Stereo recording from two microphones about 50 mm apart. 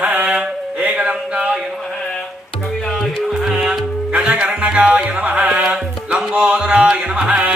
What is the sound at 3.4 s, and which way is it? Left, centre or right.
Music, centre.